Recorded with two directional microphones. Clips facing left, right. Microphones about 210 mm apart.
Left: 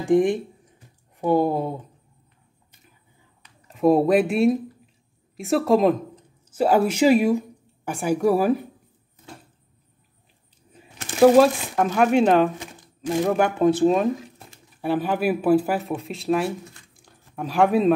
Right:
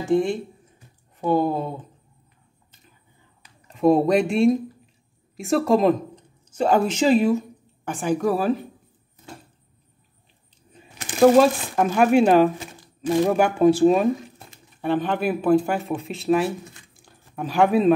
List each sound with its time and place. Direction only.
0.0 s speech: 15° left (ahead or behind)
3.6 s speech: 5° left (ahead or behind)
11.1 s speech: 5° left (ahead or behind)
14.8 s speech: 5° left (ahead or behind)
17.0 s a sound: centre (ahead or behind)